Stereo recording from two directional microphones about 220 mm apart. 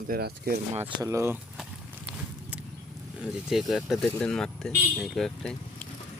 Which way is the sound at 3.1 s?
5° right (ahead or behind).